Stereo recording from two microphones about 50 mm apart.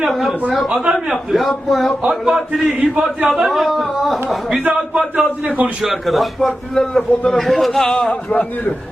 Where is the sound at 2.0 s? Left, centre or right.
Centre.